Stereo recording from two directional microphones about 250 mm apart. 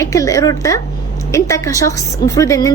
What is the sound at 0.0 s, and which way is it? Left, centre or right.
A woman's voice, centre.